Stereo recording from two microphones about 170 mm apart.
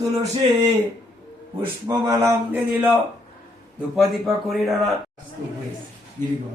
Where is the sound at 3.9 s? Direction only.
Centre (ahead or behind).